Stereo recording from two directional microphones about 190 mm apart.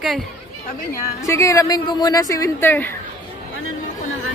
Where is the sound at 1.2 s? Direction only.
15° left (ahead or behind).